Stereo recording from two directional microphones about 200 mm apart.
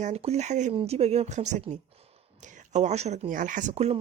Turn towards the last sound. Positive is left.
turn(degrees=-30)  # may be behind; listen again after turning